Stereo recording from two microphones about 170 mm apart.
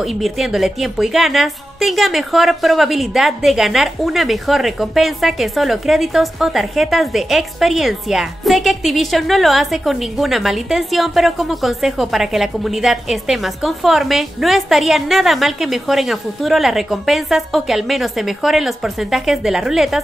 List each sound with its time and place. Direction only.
0.0 s speech: centre (ahead or behind)